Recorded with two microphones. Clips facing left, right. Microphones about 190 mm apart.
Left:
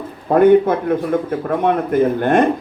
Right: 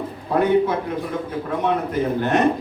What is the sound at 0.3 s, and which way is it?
Speech, 55° left (ahead or behind).